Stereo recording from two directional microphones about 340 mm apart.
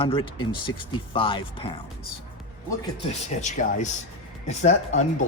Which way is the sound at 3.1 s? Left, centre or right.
Left.